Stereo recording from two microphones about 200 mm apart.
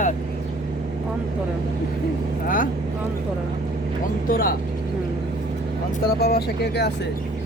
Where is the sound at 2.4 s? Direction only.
40° left (ahead or behind).